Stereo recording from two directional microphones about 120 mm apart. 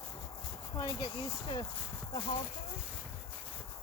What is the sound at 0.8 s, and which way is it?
Speech, 30° left (ahead or behind).